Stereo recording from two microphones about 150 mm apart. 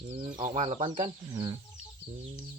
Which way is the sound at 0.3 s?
60° right (ahead or behind).